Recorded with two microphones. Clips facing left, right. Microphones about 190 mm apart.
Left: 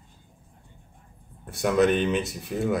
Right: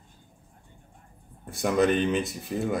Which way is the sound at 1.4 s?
Centre (ahead or behind).